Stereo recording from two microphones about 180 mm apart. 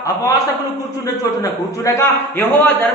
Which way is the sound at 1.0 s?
20° left (ahead or behind).